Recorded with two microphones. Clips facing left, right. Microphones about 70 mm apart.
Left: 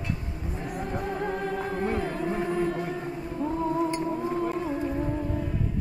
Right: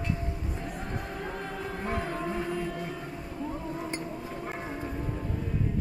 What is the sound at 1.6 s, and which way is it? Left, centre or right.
Music, left.